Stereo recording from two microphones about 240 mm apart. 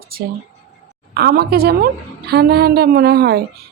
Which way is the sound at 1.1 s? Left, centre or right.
Right.